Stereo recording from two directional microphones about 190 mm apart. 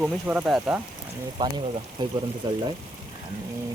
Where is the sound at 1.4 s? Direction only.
20° right (ahead or behind).